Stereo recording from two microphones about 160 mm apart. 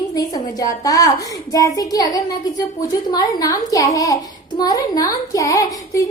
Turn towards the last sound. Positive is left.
turn(degrees=20)  # may be behind; listen again after turning